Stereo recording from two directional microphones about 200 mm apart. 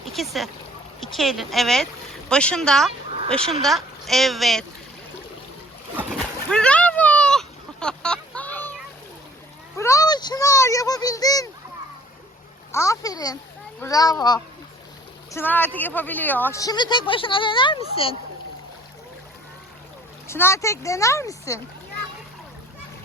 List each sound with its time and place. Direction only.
0.0 s speech: centre (ahead or behind)
6.1 s a sound: 5° left (ahead or behind)
9.7 s speech: 15° left (ahead or behind)
12.7 s a child's voice: 15° left (ahead or behind)
20.2 s speech: 10° left (ahead or behind)